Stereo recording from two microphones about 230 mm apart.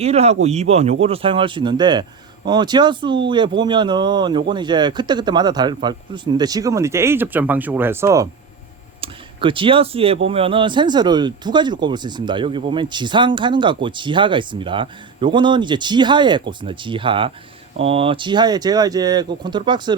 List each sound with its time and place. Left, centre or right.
0.0 s speech: right